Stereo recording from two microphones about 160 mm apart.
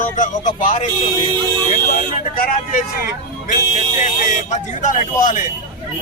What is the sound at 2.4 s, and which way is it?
Speech, 65° left (ahead or behind).